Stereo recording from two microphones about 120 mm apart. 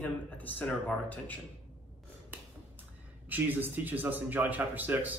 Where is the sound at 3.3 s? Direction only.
15° right (ahead or behind).